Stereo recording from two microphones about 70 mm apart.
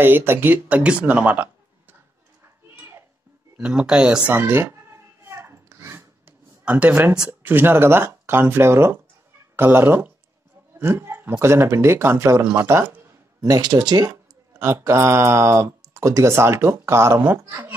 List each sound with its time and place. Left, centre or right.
0.0 s speech: right
3.5 s speech: centre
4.3 s a sound: right
6.6 s speech: centre; by 12.8 s right
13.4 s speech: right
14.6 s speech: right
17.2 s speech: right